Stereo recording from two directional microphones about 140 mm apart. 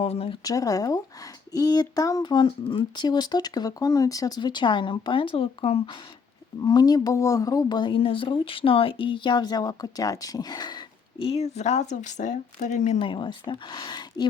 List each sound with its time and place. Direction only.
0.0 s speech: 45° left (ahead or behind)
0.4 s speech: 25° left (ahead or behind); by 6.0 s 40° left (ahead or behind)
6.6 s speech: 30° left (ahead or behind)
11.3 s speech: 50° left (ahead or behind)
13.0 s speech: 35° left (ahead or behind)